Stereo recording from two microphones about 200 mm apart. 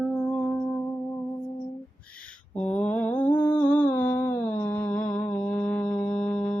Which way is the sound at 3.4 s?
10° left (ahead or behind).